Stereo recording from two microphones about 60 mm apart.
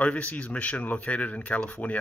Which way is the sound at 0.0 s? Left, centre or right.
Left.